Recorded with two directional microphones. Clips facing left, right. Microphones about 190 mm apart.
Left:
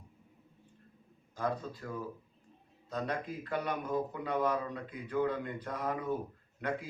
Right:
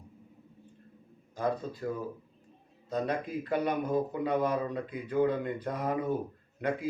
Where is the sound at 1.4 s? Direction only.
15° right (ahead or behind).